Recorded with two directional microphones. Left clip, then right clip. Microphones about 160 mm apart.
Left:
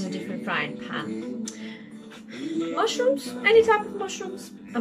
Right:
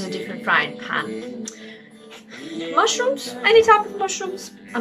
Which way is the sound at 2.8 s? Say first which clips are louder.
Right 5 dB; 25° left (ahead or behind).